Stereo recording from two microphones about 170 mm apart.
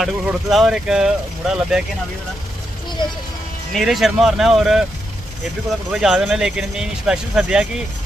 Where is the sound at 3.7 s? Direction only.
Centre (ahead or behind).